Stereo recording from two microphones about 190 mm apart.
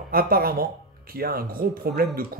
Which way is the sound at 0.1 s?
50° right (ahead or behind).